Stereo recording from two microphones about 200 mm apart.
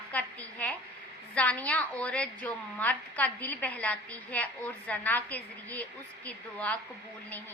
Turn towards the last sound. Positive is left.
turn(degrees=5)  # may be behind; listen again after turning